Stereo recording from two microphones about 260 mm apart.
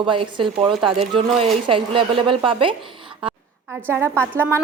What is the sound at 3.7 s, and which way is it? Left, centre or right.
Speech, centre.